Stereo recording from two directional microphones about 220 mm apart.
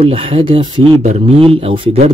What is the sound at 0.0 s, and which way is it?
Speech, 25° right (ahead or behind).